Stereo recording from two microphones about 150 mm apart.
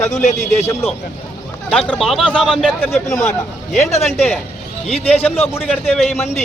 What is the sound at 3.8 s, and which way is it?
Speech, 45° left (ahead or behind).